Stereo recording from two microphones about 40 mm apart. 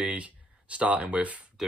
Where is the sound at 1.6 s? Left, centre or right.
Centre.